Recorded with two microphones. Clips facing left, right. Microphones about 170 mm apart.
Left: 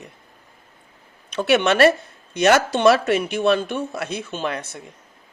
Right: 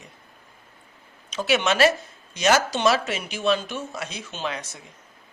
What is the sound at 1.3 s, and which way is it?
Speech, 60° left (ahead or behind).